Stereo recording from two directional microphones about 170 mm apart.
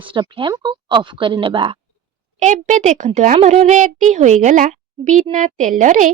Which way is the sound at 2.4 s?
45° right (ahead or behind).